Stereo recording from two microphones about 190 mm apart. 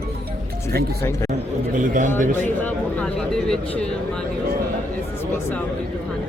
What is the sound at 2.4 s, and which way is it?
Speech, 10° left (ahead or behind).